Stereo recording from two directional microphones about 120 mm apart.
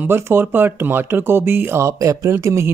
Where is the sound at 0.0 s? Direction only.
15° right (ahead or behind).